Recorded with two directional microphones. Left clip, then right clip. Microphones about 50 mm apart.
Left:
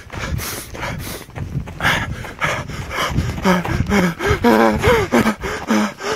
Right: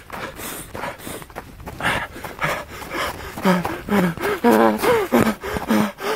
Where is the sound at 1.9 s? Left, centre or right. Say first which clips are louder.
Left 3 dB; left.